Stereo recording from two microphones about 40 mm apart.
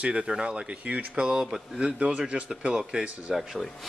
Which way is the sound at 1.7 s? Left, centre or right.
Right.